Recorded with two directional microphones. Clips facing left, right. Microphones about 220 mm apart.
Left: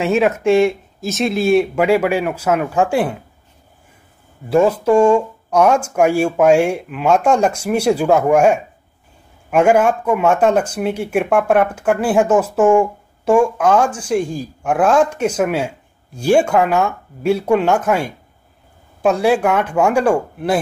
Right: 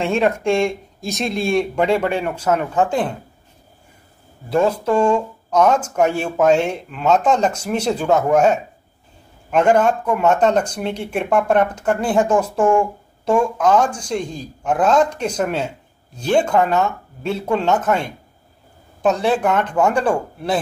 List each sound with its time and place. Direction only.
0.0 s speech: 5° left (ahead or behind)
4.5 s speech: 10° left (ahead or behind)